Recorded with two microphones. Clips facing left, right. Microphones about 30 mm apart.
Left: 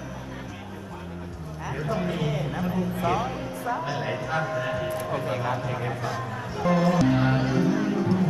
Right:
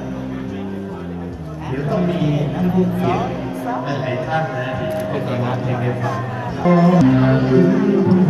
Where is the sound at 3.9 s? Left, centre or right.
Right.